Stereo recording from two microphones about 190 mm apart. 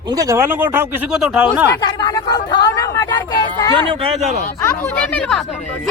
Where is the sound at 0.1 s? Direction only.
15° right (ahead or behind).